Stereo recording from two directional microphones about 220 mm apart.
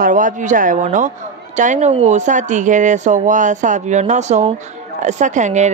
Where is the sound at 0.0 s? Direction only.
35° right (ahead or behind).